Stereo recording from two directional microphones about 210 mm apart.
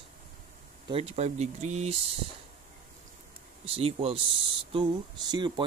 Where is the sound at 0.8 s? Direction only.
30° right (ahead or behind).